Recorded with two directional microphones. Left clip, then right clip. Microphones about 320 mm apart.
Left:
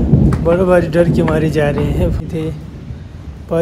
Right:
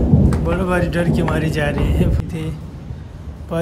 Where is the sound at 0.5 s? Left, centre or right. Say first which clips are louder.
Left 10 dB; centre.